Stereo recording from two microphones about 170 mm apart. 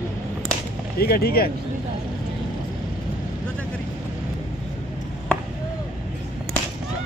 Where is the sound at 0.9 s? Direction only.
65° left (ahead or behind).